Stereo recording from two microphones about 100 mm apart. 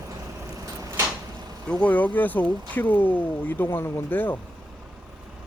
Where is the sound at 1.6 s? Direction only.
15° left (ahead or behind).